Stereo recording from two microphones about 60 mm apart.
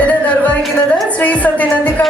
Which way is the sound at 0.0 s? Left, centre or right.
Left.